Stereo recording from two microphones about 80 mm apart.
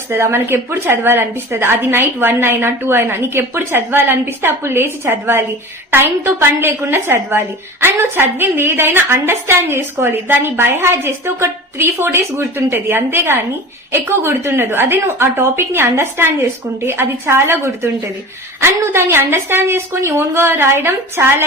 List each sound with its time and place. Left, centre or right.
0.1 s a woman's voice: right